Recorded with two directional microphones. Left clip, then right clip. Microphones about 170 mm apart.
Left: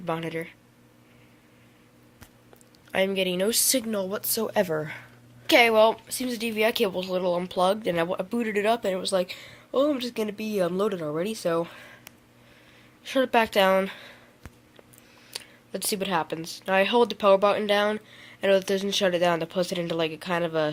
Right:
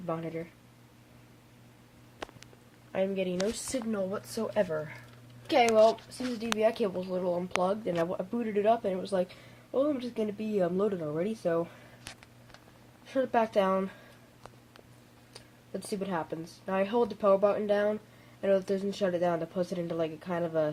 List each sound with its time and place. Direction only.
0.0 s speech: 20° left (ahead or behind)
2.9 s speech: 20° left (ahead or behind)
4.1 s speech: 50° left (ahead or behind)
5.5 s speech: 20° left (ahead or behind)
13.3 s speech: 15° left (ahead or behind)
15.3 s speech: 15° left (ahead or behind)